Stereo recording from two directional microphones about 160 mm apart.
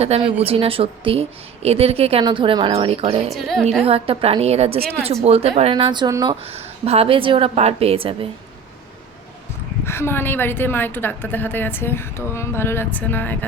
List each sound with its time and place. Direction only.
0.2 s speech: 35° right (ahead or behind)
3.2 s a woman's voice: centre (ahead or behind)
3.8 s speech: 35° right (ahead or behind)
6.4 s speech: 40° right (ahead or behind)
9.8 s a woman's voice: 15° left (ahead or behind)